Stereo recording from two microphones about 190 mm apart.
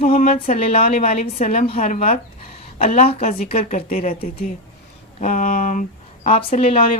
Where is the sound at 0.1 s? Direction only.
50° left (ahead or behind).